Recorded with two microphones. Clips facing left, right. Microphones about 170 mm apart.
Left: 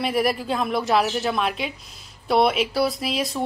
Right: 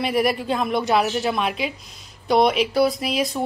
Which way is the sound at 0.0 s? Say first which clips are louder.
Right 1 dB; centre (ahead or behind).